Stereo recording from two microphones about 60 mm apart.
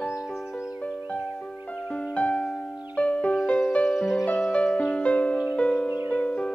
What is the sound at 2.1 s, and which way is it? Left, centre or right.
Music, centre.